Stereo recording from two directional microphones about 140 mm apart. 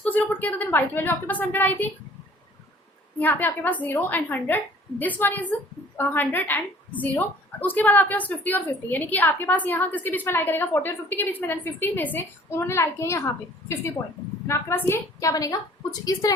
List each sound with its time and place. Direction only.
0.0 s a woman's voice: 10° left (ahead or behind)
3.2 s a woman's voice: 15° left (ahead or behind)